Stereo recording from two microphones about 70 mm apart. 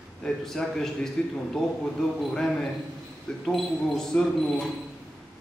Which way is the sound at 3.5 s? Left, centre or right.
Centre.